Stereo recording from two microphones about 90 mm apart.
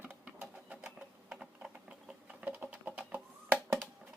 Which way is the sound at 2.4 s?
20° right (ahead or behind).